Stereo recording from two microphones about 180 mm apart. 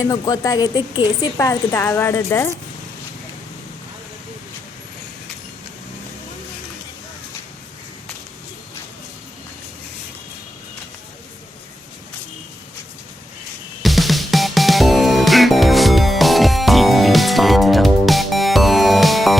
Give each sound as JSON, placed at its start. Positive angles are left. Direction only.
{"t": 0.0, "sound": "a woman's voice", "side_deg": 20}
{"t": 13.8, "sound": "music", "side_deg": 0}